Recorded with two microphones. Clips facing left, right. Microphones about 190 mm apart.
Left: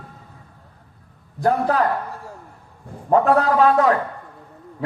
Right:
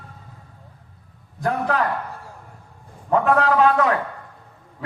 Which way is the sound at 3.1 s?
40° left (ahead or behind).